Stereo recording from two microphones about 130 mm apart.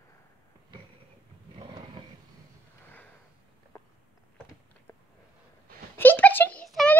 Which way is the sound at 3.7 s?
25° left (ahead or behind).